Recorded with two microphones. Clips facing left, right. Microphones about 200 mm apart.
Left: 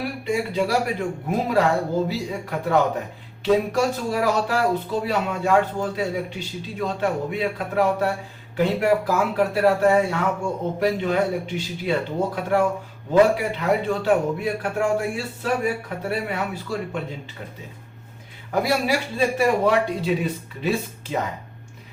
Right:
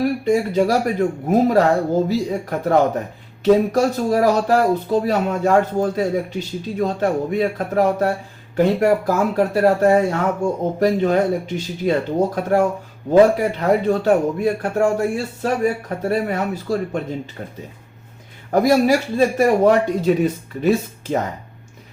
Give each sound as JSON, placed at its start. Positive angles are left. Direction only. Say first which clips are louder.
{"t": 0.0, "sound": "a man's voice", "louder": "right 7 dB", "side_deg": -45}
{"t": 18.5, "sound": "a man's voice", "louder": "right 7 dB", "side_deg": -45}